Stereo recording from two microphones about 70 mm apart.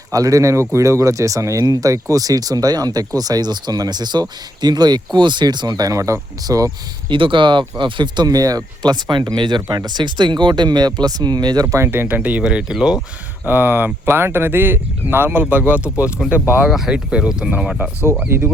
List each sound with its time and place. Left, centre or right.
0.1 s speech: right
1.6 s speech: right
5.9 s speech: right
8.0 s speech: right
11.6 s speech: right
11.9 s speech: right
12.4 s speech: centre
13.4 s speech: right
16.6 s speech: centre
18.3 s speech: right